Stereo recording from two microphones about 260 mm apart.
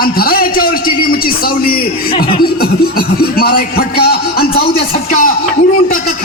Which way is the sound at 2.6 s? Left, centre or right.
Left.